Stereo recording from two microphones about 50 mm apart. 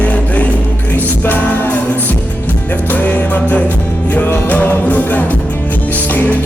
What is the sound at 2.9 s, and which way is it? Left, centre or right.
Music, left.